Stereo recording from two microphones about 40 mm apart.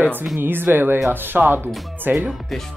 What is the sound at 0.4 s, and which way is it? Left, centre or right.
Speech, right.